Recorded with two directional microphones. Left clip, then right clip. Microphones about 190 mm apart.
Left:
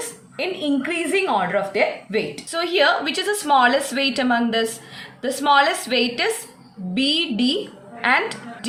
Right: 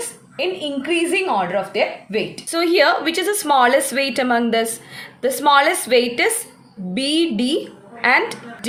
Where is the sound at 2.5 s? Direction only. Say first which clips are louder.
Right 3 dB; 30° right (ahead or behind).